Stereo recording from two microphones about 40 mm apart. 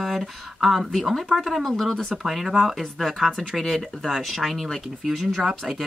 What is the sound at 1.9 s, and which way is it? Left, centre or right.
Speech, centre.